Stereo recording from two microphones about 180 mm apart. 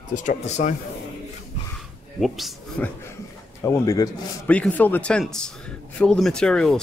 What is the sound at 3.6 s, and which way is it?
Speech, 15° left (ahead or behind).